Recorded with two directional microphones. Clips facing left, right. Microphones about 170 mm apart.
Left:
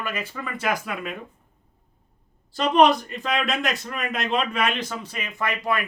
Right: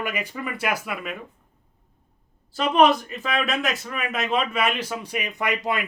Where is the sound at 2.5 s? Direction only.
Centre (ahead or behind).